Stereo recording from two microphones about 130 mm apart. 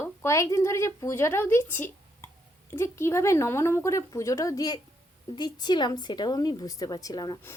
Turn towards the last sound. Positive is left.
turn(degrees=30)  # may be behind; listen again after turning